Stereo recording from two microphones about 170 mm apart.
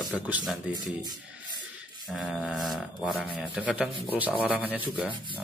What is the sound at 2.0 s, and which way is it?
A man's voice, centre (ahead or behind).